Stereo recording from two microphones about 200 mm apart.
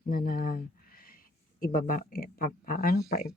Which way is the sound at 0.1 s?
45° left (ahead or behind).